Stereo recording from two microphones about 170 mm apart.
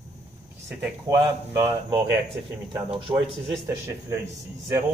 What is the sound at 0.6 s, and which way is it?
Speech, 15° right (ahead or behind).